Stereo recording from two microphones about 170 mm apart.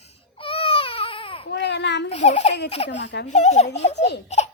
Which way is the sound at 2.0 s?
40° left (ahead or behind).